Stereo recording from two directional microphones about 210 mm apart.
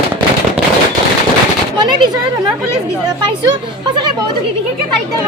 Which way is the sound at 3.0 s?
20° right (ahead or behind).